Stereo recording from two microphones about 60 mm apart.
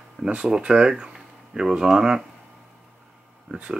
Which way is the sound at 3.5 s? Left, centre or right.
Centre.